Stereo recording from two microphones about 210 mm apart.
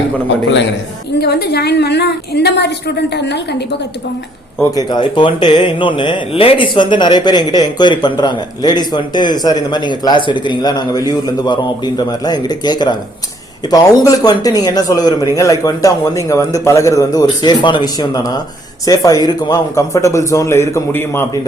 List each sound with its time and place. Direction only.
1.2 s a woman's voice: 50° left (ahead or behind)
4.7 s speech: 20° left (ahead or behind)